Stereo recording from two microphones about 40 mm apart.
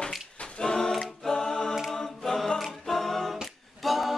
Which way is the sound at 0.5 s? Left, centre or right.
Centre.